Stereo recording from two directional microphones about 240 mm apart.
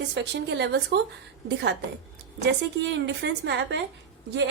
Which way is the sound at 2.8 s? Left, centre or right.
Right.